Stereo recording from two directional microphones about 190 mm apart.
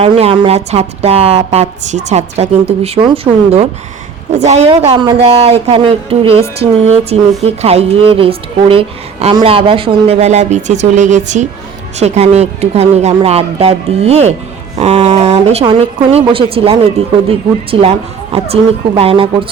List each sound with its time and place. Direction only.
0.0 s speech: 30° right (ahead or behind)